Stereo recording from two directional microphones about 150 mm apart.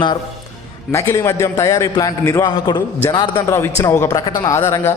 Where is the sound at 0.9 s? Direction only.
20° left (ahead or behind).